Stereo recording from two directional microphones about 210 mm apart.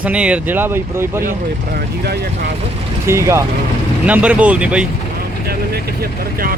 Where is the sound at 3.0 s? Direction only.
15° right (ahead or behind).